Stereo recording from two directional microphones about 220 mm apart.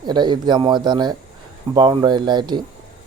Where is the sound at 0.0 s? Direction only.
20° right (ahead or behind).